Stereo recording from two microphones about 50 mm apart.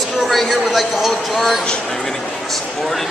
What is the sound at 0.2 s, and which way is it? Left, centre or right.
Speech, centre.